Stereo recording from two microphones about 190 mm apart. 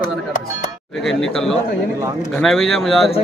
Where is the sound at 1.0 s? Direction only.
Centre (ahead or behind).